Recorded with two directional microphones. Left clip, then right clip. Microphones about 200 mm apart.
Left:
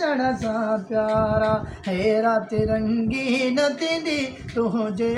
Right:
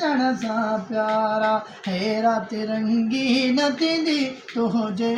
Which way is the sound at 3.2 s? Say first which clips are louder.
Even; 15° left (ahead or behind).